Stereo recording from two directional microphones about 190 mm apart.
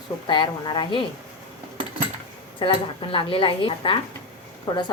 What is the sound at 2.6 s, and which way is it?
A woman's voice, 25° left (ahead or behind).